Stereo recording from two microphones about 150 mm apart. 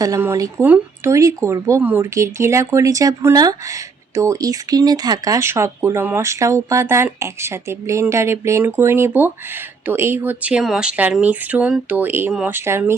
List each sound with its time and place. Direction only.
0.0 s speech: 20° right (ahead or behind)